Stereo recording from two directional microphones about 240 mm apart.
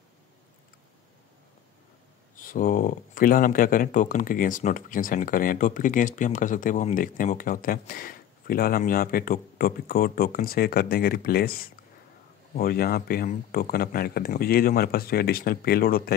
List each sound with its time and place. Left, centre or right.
2.3 s speech: left